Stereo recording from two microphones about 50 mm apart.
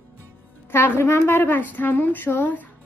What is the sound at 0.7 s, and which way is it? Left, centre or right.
Speech, left.